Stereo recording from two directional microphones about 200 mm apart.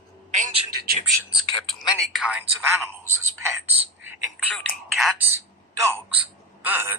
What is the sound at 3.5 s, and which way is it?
Speech, 10° right (ahead or behind).